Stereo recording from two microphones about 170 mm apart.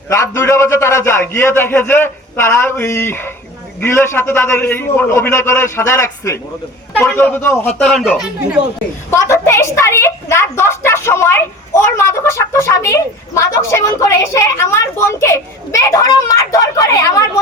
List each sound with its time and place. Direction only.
0.1 s a woman's voice: 15° left (ahead or behind)
7.9 s speech: 5° left (ahead or behind)
9.0 s a woman's voice: 15° left (ahead or behind)